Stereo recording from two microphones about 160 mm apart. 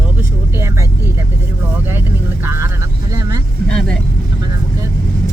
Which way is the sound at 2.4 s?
15° right (ahead or behind).